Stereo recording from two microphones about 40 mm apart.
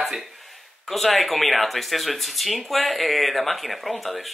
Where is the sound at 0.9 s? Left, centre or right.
Centre.